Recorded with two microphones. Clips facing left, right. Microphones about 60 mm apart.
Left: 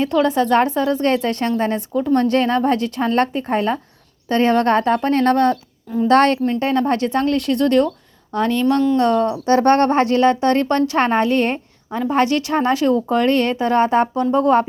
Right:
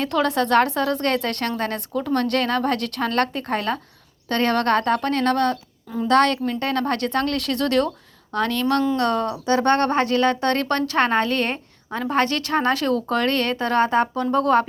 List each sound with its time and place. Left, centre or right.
0.0 s a woman's voice: centre
1.0 s a woman's voice: centre
5.1 s speech: left
6.5 s a woman's voice: left
9.5 s speech: left
11.9 s a woman's voice: centre